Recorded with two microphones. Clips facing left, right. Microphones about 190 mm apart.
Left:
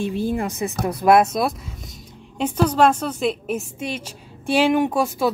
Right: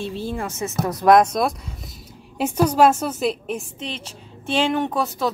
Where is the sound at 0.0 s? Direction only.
15° left (ahead or behind).